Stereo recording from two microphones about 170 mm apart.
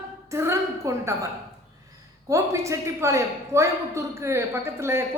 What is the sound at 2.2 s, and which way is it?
A woman's voice, 15° right (ahead or behind).